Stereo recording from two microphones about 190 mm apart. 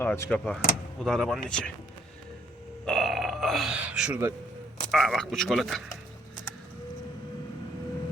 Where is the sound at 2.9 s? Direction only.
Centre (ahead or behind).